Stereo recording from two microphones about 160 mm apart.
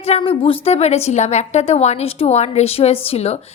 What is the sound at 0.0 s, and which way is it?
A woman's voice, 35° left (ahead or behind).